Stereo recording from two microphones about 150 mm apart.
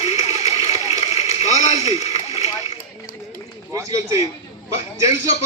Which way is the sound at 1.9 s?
45° left (ahead or behind).